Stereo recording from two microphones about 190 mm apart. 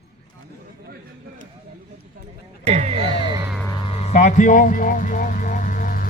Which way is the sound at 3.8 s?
30° left (ahead or behind).